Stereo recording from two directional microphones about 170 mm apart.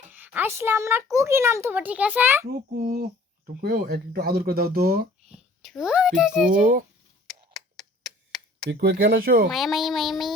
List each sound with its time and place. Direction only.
0.1 s a child's voice: 10° right (ahead or behind)
2.9 s speech: 65° right (ahead or behind)
5.3 s a child's voice: centre (ahead or behind)
6.5 s speech: 55° right (ahead or behind)
7.5 s tick: centre (ahead or behind)
8.7 s speech: 65° right (ahead or behind)
9.5 s a child's voice: centre (ahead or behind)